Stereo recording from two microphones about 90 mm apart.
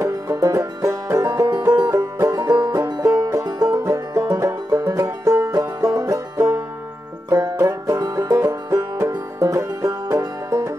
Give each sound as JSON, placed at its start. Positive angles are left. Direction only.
{"t": 0.3, "sound": "music", "side_deg": -40}
{"t": 1.7, "sound": "banjo", "side_deg": -50}
{"t": 2.0, "sound": "music", "side_deg": -30}
{"t": 2.3, "sound": "banjo", "side_deg": -45}
{"t": 3.0, "sound": "music", "side_deg": -35}
{"t": 7.3, "sound": "banjo", "side_deg": -35}
{"t": 9.4, "sound": "music", "side_deg": -40}